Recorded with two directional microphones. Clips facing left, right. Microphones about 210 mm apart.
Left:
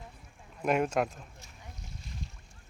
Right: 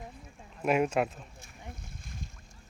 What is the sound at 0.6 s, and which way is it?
Speech, 5° right (ahead or behind).